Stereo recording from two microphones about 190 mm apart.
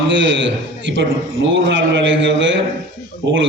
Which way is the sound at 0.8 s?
70° right (ahead or behind).